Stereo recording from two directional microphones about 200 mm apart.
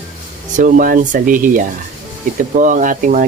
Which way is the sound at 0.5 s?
40° right (ahead or behind).